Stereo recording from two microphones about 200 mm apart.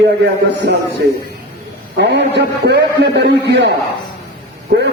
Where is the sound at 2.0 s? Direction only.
60° right (ahead or behind).